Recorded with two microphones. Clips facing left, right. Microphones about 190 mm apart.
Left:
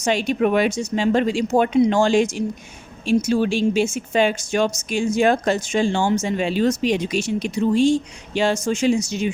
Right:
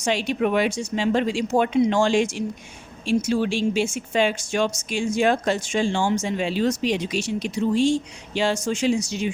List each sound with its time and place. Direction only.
0.0 s speech: 45° left (ahead or behind)